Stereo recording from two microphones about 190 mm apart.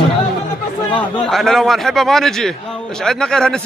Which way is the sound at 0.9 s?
Centre (ahead or behind).